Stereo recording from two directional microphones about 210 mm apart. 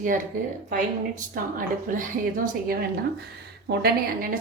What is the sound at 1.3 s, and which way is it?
A woman's voice, 40° right (ahead or behind).